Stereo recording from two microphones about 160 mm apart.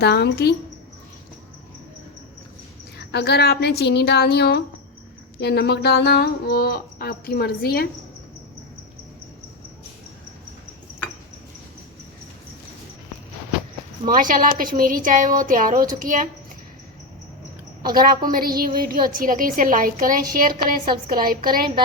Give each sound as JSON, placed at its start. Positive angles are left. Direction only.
{"t": 0.0, "sound": "a woman's voice", "side_deg": 90}
{"t": 3.1, "sound": "a woman's voice", "side_deg": 90}
{"t": 5.4, "sound": "a sound", "side_deg": 90}
{"t": 14.0, "sound": "a woman's voice", "side_deg": -55}
{"t": 17.9, "sound": "a woman's voice", "side_deg": -65}